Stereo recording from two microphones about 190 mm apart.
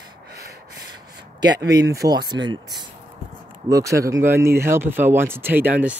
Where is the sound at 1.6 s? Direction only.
20° right (ahead or behind).